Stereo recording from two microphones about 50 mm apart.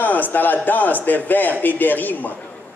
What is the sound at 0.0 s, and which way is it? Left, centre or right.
A man's voice, left.